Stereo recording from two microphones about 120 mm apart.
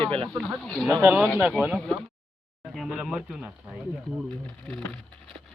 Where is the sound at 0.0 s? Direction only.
45° right (ahead or behind).